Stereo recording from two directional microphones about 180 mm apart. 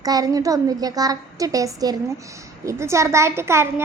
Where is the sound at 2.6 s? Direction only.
15° right (ahead or behind).